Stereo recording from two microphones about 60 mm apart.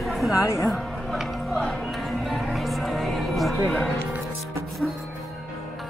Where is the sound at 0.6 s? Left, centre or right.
Centre.